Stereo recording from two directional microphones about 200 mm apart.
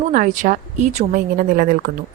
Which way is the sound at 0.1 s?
40° right (ahead or behind).